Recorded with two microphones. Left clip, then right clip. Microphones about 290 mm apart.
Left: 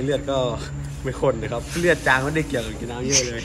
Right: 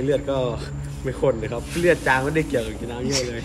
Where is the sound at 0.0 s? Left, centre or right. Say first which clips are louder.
Even; centre.